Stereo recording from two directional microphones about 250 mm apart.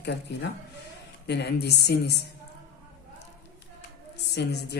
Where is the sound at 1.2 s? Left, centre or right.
Left.